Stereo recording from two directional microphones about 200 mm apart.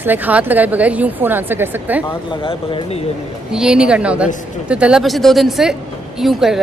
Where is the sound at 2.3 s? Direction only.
25° left (ahead or behind).